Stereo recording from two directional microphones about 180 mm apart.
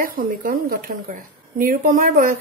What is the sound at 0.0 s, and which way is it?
A woman's voice, 50° right (ahead or behind).